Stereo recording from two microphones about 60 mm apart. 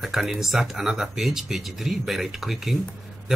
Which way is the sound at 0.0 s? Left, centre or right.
Centre.